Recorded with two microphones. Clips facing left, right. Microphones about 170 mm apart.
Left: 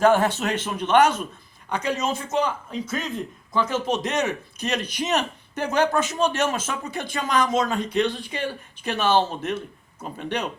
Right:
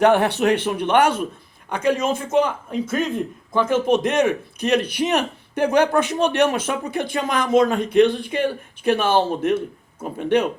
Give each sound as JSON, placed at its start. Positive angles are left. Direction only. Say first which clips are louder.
{"t": 0.0, "sound": "a man's voice", "louder": "right 3 dB", "side_deg": -65}